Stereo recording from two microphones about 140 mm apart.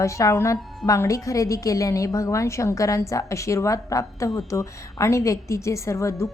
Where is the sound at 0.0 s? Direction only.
20° left (ahead or behind).